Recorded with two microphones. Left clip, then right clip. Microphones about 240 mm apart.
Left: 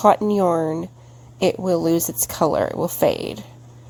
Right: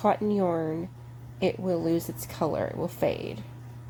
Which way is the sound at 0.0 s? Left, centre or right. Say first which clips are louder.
Left 9 dB; left.